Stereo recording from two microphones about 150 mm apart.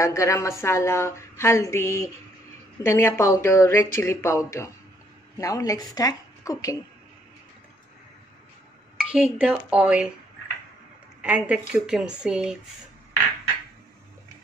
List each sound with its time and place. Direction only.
0.0 s a woman's voice: 20° left (ahead or behind)
8.9 s speech: 5° right (ahead or behind)
11.1 s a woman's voice: 10° right (ahead or behind)